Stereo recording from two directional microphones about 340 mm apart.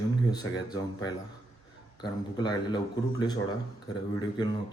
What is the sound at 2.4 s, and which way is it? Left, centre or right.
Speech, centre.